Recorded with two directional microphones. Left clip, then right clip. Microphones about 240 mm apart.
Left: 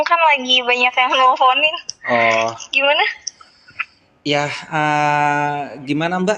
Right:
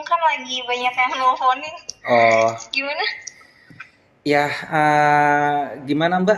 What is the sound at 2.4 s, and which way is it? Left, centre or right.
Speech, left.